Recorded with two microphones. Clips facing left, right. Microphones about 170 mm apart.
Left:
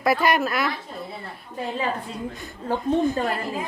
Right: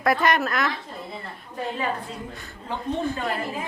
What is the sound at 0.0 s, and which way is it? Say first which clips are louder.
Speech: left 1 dB; 5° left (ahead or behind).